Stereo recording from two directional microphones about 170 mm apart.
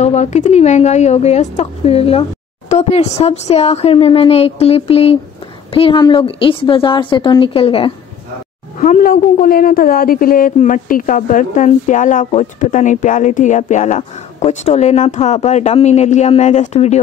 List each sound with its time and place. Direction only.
0.0 s speech: 40° left (ahead or behind)
8.7 s a woman's voice: 50° left (ahead or behind)